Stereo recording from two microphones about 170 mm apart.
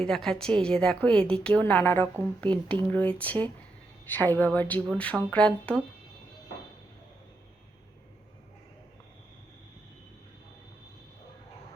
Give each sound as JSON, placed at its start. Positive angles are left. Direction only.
{"t": 0.0, "sound": "a woman's voice", "side_deg": 5}